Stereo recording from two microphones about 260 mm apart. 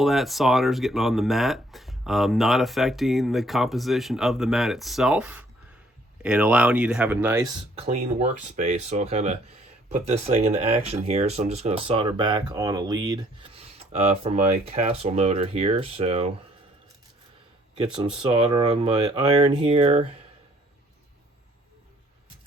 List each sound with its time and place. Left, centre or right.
0.0 s speech: centre
7.8 s speech: right
17.9 s speech: centre